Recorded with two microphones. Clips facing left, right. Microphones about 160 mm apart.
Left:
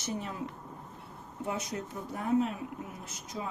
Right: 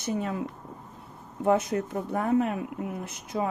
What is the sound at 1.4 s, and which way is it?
Speech, 60° right (ahead or behind).